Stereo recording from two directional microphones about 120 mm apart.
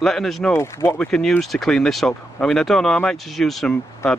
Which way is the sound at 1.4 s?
Centre (ahead or behind).